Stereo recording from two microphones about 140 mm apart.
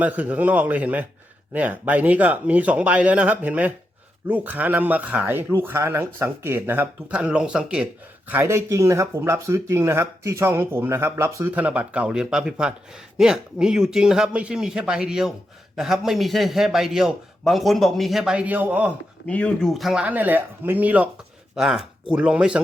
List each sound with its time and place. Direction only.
0.0 s speech: 10° right (ahead or behind)
8.3 s a man's voice: 20° right (ahead or behind)
19.3 s speech: 10° left (ahead or behind); by 22.6 s 5° right (ahead or behind)